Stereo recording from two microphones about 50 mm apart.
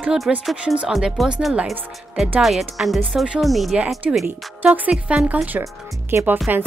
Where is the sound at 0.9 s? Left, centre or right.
Centre.